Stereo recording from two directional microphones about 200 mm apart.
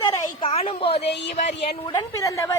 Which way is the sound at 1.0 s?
60° left (ahead or behind).